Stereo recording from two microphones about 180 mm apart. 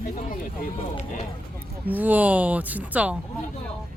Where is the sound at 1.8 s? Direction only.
10° right (ahead or behind).